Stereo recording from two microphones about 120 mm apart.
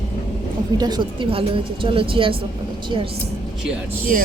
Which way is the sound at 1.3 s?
50° right (ahead or behind).